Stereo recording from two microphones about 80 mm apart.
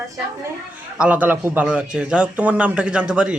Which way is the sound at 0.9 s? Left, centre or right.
Centre.